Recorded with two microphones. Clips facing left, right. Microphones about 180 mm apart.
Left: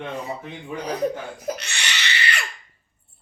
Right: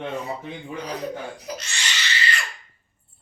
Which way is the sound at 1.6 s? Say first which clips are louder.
Left 1 dB; 65° left (ahead or behind).